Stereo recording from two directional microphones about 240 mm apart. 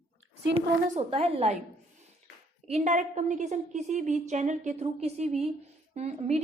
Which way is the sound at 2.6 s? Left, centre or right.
Right.